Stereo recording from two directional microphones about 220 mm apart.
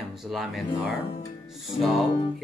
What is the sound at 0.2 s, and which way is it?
Speech, centre (ahead or behind).